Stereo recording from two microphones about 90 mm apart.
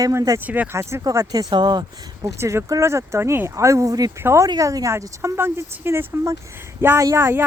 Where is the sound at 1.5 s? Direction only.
55° right (ahead or behind).